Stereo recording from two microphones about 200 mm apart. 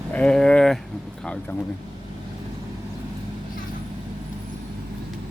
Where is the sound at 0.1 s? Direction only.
5° left (ahead or behind).